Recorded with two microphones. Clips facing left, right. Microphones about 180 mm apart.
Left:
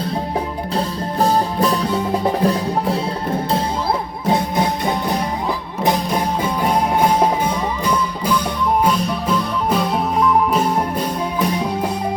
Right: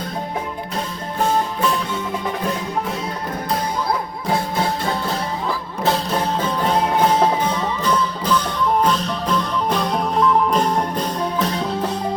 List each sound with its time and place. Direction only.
1.2 s music: 35° left (ahead or behind)
4.3 s music: 20° left (ahead or behind)